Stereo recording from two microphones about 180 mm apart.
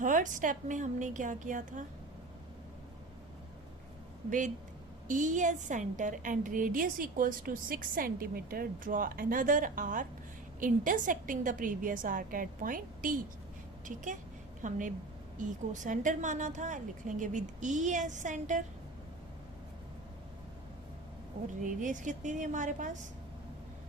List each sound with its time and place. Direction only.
0.0 s a woman's voice: 45° right (ahead or behind)
4.3 s a woman's voice: 45° right (ahead or behind)
21.6 s a woman's voice: 45° right (ahead or behind)